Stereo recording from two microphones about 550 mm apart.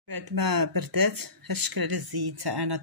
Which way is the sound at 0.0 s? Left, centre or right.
Right.